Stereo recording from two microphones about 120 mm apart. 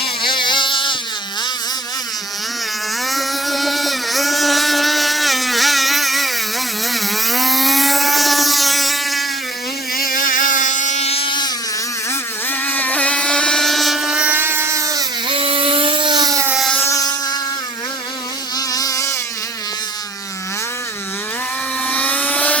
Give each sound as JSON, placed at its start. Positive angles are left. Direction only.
{"t": 0.2, "sound": "a sound", "side_deg": 40}
{"t": 3.1, "sound": "motorboat", "side_deg": 0}
{"t": 6.9, "sound": "vehicle", "side_deg": 0}
{"t": 10.2, "sound": "motorboat", "side_deg": 90}
{"t": 11.1, "sound": "a sound", "side_deg": 45}
{"t": 12.5, "sound": "motorboat", "side_deg": 15}
{"t": 15.3, "sound": "a sound", "side_deg": -50}
{"t": 16.5, "sound": "motorboat", "side_deg": 0}
{"t": 16.7, "sound": "motorboat", "side_deg": 25}
{"t": 18.5, "sound": "insect", "side_deg": 30}
{"t": 21.8, "sound": "helicopter", "side_deg": 15}